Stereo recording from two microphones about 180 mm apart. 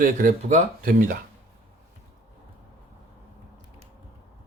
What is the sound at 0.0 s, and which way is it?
Speech, 50° right (ahead or behind).